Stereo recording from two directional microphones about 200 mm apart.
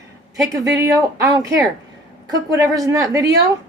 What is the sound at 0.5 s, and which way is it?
A woman's voice, 15° right (ahead or behind).